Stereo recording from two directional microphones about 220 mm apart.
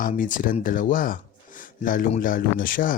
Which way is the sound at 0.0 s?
35° left (ahead or behind).